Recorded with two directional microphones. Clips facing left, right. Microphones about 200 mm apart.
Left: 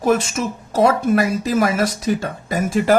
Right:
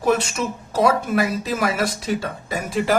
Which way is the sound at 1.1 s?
45° left (ahead or behind).